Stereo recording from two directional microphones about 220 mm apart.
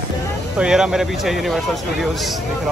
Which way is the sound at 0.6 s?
5° right (ahead or behind).